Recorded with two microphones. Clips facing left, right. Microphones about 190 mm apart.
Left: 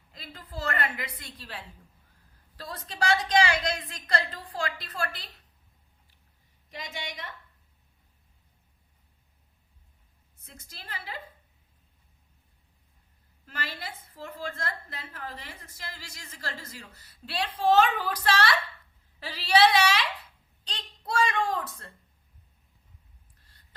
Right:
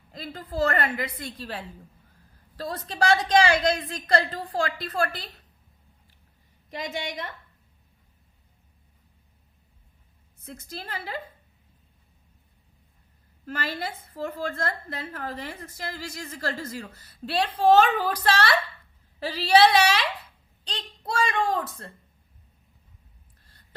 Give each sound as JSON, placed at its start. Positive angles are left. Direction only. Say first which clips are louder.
{"t": 0.1, "sound": "a woman's voice", "louder": "right 8 dB", "side_deg": -45}
{"t": 6.7, "sound": "a woman's voice", "louder": "right 7 dB", "side_deg": -55}
{"t": 10.4, "sound": "a woman's voice", "louder": "right 11 dB", "side_deg": -45}
{"t": 13.4, "sound": "a woman's voice", "louder": "right 7 dB", "side_deg": -50}